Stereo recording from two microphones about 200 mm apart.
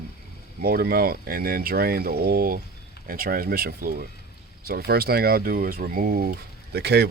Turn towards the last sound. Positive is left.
turn(degrees=-55)  # may be behind; listen again after turning